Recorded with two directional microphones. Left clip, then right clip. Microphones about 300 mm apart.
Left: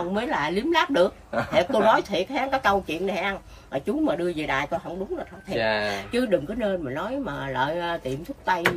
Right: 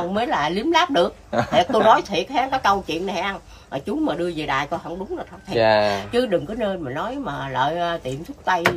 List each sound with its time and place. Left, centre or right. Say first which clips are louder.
0.1 s a woman's voice: right 4 dB; centre
5.5 s a woman's voice: right 8 dB; centre
6.1 s a woman's voice: right 3 dB; centre